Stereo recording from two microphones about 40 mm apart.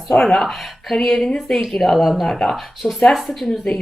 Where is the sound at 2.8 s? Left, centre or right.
Centre.